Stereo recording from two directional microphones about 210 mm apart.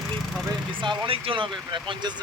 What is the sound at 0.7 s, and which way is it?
Speech, 25° right (ahead or behind).